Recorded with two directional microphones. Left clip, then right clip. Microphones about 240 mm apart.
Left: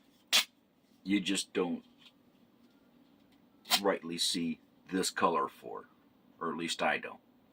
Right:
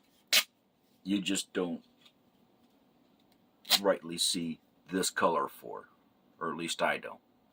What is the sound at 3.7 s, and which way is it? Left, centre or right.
Speech, right.